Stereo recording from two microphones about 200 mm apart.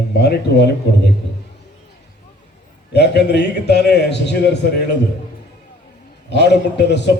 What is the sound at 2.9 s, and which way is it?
A man's voice, 55° left (ahead or behind).